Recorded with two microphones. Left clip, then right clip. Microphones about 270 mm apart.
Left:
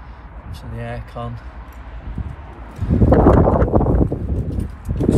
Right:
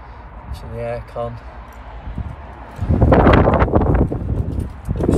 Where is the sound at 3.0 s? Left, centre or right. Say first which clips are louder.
Right 1 dB; centre.